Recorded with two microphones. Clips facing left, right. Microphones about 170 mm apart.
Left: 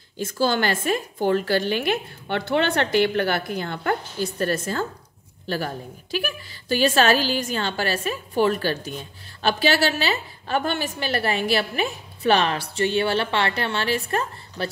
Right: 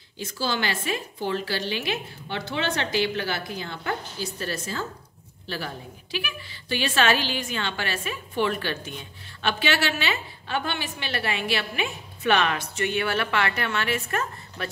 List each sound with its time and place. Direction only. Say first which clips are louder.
0.2 s a woman's voice: left 6 dB; 50° left (ahead or behind); by 14.7 s 30° left (ahead or behind)